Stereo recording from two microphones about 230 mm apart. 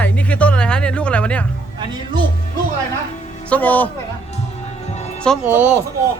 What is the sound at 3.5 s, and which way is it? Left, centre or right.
Speech, centre.